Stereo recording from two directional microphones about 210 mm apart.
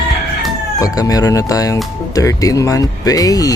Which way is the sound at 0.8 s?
15° left (ahead or behind).